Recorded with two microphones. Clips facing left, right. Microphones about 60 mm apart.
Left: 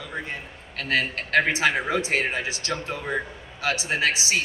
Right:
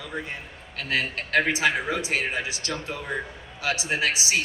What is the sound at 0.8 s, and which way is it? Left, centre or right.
A man's voice, left.